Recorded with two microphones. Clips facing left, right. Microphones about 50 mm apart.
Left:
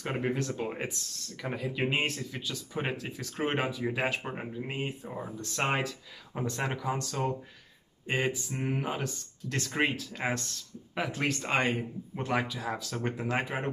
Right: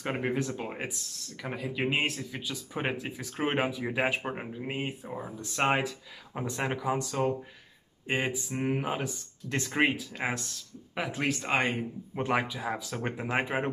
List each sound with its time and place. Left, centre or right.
0.0 s speech: centre
12.2 s speech: centre